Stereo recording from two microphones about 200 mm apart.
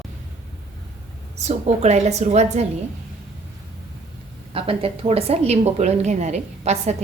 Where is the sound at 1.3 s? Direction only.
35° right (ahead or behind).